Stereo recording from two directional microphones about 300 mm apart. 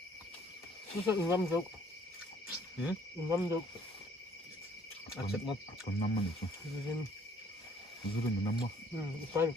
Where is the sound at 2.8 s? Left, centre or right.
Centre.